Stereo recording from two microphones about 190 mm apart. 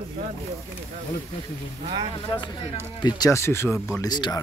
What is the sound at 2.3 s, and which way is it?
Speech, 25° left (ahead or behind).